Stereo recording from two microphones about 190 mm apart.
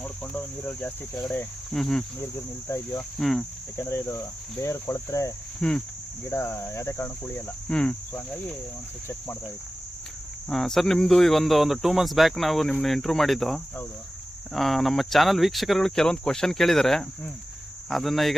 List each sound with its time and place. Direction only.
0.0 s speech: 5° left (ahead or behind)
2.2 s cricket: 15° left (ahead or behind)
3.2 s speech: centre (ahead or behind)
3.8 s cricket: 15° left (ahead or behind)
5.5 s speech: 5° left (ahead or behind)
6.3 s cricket: 15° left (ahead or behind)
10.5 s speech: centre (ahead or behind)